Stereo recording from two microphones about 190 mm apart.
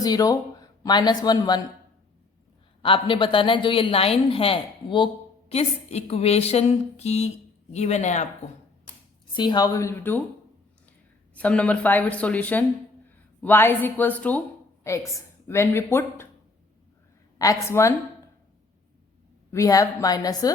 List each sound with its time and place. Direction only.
0.0 s speech: 20° left (ahead or behind)
2.8 s a woman's voice: 25° left (ahead or behind)
5.5 s a sound: 35° left (ahead or behind)
9.3 s speech: 25° left (ahead or behind)
11.3 s a woman's voice: 5° left (ahead or behind)
17.3 s speech: 20° left (ahead or behind)
19.5 s speech: 15° left (ahead or behind)